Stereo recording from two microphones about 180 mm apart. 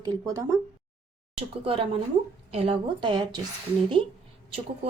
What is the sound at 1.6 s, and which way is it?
A woman's voice, 30° right (ahead or behind).